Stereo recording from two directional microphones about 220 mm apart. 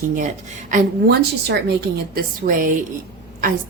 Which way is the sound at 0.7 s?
45° right (ahead or behind).